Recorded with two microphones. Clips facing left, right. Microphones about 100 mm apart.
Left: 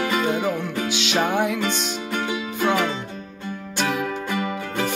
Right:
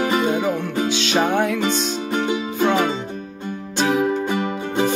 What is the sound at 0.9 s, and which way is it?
Music, 10° left (ahead or behind).